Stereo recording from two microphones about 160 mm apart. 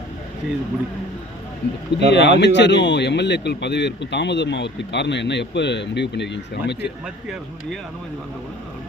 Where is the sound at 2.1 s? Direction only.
90° left.